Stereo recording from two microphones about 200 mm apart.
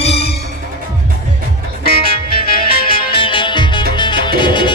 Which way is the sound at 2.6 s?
45° left (ahead or behind).